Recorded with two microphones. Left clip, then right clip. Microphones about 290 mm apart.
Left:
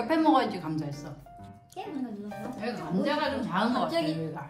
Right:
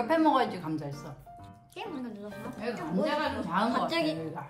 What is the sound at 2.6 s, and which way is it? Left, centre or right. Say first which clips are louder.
Speech: right 1 dB; centre.